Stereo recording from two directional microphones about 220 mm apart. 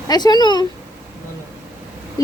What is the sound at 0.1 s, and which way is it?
Speech, 20° left (ahead or behind).